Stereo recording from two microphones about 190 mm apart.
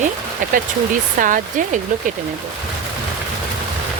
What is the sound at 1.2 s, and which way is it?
Speech, 45° right (ahead or behind).